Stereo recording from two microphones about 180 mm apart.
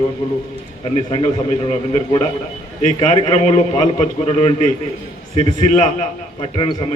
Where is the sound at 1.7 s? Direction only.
35° left (ahead or behind).